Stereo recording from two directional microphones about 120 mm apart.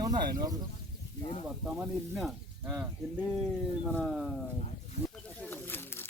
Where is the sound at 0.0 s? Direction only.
30° right (ahead or behind).